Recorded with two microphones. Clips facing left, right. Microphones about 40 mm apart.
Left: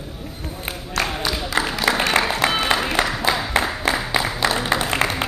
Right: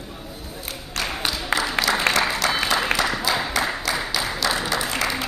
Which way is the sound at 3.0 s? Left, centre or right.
Left.